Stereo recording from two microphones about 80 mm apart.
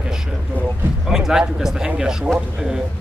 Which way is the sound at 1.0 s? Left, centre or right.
Centre.